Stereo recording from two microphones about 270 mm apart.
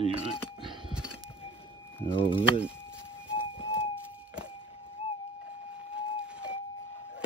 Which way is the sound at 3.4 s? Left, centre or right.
Centre.